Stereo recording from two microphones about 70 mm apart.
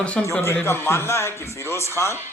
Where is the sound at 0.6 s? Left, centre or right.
Left.